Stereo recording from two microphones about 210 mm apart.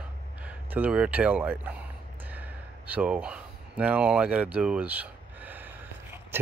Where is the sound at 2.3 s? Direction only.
5° right (ahead or behind).